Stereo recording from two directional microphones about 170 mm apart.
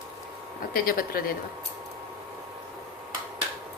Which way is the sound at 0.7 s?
55° left (ahead or behind).